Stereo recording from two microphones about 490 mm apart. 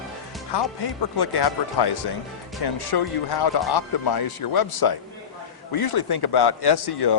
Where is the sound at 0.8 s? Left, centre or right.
Left.